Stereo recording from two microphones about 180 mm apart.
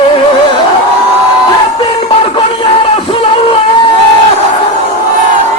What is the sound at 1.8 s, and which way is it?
Music, 30° left (ahead or behind).